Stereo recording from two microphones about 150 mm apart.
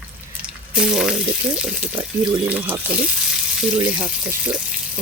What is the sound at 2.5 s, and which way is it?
Speech, 10° right (ahead or behind).